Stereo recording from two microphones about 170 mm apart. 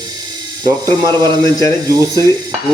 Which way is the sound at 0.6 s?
25° right (ahead or behind).